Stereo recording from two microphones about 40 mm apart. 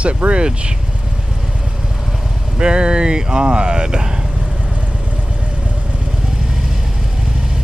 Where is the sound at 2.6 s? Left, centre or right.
Right.